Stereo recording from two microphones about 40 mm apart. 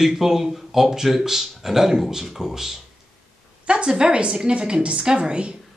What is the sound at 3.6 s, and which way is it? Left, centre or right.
A woman's voice, right.